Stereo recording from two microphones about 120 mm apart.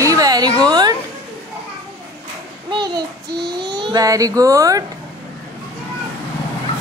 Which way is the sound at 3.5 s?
35° right (ahead or behind).